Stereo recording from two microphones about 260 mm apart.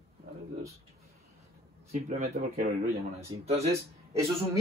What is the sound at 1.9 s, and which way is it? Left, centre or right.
Speech, right.